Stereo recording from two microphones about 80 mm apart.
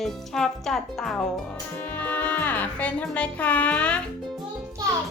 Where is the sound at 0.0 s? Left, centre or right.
Centre.